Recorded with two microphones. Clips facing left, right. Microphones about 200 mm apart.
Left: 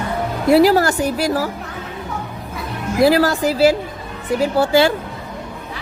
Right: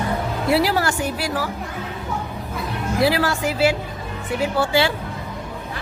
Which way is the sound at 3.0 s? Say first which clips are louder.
Left 6 dB; 40° left (ahead or behind).